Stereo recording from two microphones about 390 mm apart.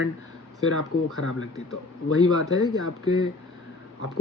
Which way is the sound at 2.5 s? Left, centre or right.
Centre.